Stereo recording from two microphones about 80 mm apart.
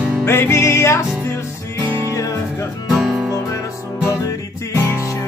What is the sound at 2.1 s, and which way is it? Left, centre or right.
Music, left.